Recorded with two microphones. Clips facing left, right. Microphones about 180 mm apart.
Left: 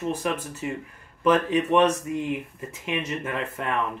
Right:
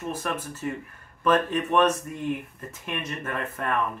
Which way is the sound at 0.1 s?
10° left (ahead or behind).